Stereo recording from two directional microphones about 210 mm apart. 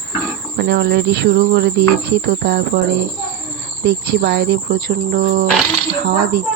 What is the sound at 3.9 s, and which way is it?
Speech, 50° right (ahead or behind).